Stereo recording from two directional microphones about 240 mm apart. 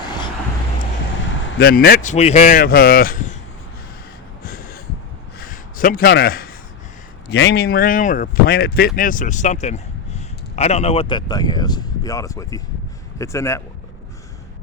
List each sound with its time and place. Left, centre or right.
1.5 s speech: left
4.4 s gasp: left
5.4 s a sound: left
7.3 s speech: left; by 13.6 s centre